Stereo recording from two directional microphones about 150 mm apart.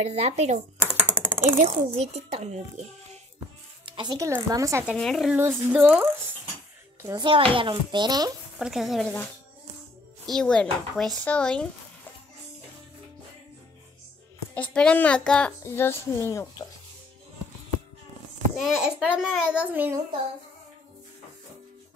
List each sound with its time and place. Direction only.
0.0 s a child's voice: 45° right (ahead or behind)
1.2 s coin: 15° right (ahead or behind)
1.6 s a child's voice: 45° right (ahead or behind)
3.8 s speech: 30° right (ahead or behind)
4.9 s speech: centre (ahead or behind)
5.3 s a child's voice: 15° right (ahead or behind)
7.0 s a child's voice: 20° right (ahead or behind)
7.2 s speech: 35° right (ahead or behind)
8.5 s speech: centre (ahead or behind)
14.5 s speech: 10° left (ahead or behind)
18.6 s a child's voice: 5° right (ahead or behind)